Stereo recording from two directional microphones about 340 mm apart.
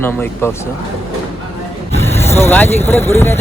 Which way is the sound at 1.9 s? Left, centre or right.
Centre.